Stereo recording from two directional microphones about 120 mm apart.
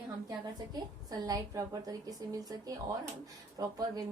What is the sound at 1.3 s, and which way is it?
A woman's voice, 30° right (ahead or behind).